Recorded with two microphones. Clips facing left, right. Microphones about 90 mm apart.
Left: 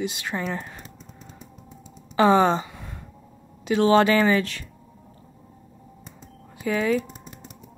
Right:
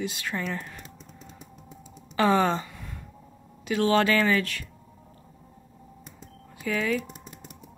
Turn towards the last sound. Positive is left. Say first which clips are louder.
# left 2 dB
turn(degrees=0)  # may be behind; listen again after turning